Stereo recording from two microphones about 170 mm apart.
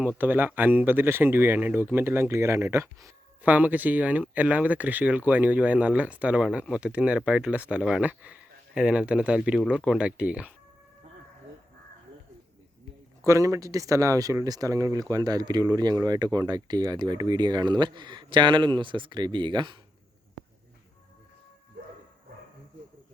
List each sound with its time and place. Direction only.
0.0 s speech: 10° right (ahead or behind)
13.2 s speech: 20° right (ahead or behind)